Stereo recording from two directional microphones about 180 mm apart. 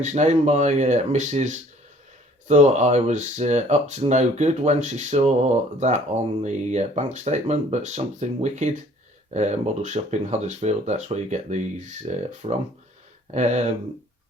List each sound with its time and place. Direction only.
0.0 s speech: 40° right (ahead or behind)